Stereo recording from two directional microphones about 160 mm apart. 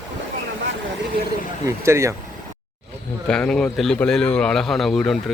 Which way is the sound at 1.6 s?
15° right (ahead or behind).